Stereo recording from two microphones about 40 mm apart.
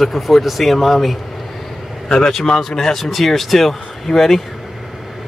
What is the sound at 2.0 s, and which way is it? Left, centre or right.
Speech, centre.